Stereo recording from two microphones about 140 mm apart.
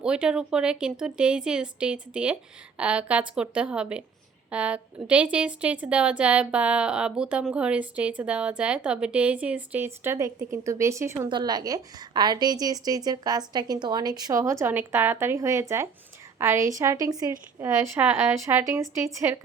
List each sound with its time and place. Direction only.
0.0 s a woman's voice: 5° right (ahead or behind)
11.3 s a woman's voice: 30° right (ahead or behind)